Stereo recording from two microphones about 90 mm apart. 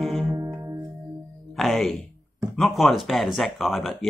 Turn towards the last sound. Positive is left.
turn(degrees=0)  # may be behind; listen again after turning